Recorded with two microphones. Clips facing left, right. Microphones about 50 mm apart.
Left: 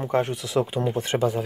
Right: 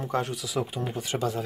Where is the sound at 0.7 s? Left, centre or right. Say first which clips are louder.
Left 7 dB; left.